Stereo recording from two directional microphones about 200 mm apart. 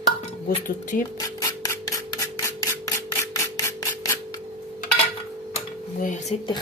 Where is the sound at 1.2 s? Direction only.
15° left (ahead or behind).